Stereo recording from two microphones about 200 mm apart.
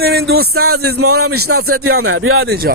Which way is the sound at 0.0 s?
55° right (ahead or behind).